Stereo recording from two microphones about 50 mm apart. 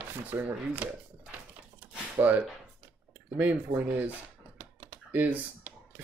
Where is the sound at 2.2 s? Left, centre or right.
Right.